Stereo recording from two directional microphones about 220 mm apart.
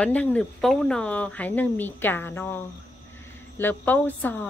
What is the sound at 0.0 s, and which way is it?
Speech, 5° left (ahead or behind).